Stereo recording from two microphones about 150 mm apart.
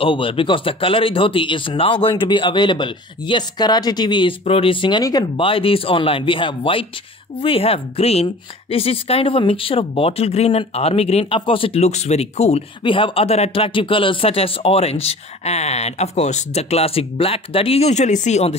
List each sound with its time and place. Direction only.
0.0 s a woman's voice: 35° left (ahead or behind)